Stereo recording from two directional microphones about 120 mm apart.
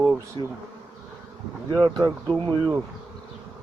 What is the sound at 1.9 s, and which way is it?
Speech, 30° right (ahead or behind).